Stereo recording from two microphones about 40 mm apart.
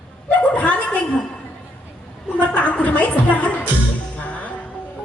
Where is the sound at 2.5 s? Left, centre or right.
Left.